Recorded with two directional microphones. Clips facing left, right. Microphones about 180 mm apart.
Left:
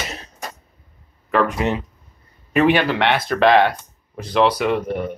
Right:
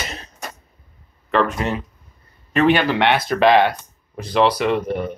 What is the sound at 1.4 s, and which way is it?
Speech, 15° left (ahead or behind).